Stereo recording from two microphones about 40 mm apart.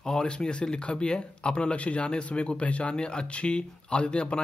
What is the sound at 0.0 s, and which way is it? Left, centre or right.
Speech, centre.